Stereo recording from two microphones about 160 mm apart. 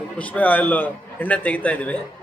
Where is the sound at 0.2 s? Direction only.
10° left (ahead or behind).